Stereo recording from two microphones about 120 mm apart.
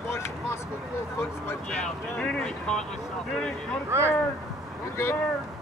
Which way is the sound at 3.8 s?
20° right (ahead or behind).